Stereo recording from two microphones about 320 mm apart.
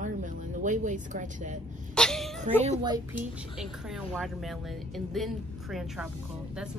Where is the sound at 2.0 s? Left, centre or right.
Centre.